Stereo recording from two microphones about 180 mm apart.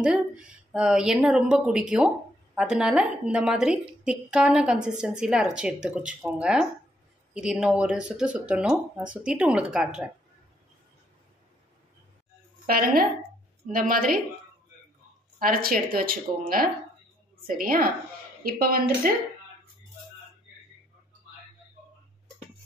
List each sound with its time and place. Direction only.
0.0 s speech: 5° right (ahead or behind)
12.6 s speech: 55° right (ahead or behind)
15.3 s speech: 50° right (ahead or behind)